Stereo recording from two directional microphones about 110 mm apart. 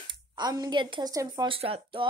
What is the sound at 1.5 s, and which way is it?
Speech, 55° right (ahead or behind).